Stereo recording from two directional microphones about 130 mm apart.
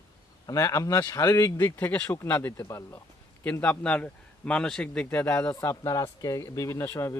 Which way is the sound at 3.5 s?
10° left (ahead or behind).